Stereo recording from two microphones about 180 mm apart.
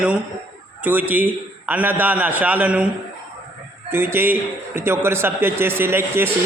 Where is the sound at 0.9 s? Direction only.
10° right (ahead or behind).